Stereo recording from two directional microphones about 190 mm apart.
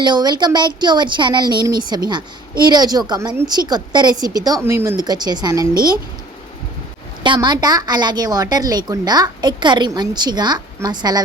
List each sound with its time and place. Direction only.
0.0 s speech: 20° right (ahead or behind)
7.2 s speech: 25° right (ahead or behind)